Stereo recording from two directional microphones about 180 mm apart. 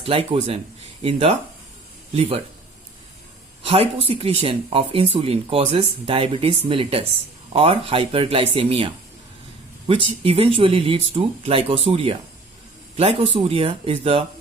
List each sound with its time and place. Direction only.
0.0 s speech: 30° right (ahead or behind)
3.6 s speech: 30° right (ahead or behind)